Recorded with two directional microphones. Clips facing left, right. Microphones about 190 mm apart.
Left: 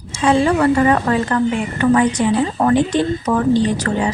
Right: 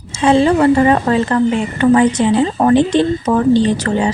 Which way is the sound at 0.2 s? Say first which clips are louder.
Right 3 dB; 25° right (ahead or behind).